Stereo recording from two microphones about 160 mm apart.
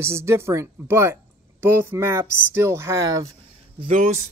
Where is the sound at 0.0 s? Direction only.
15° right (ahead or behind).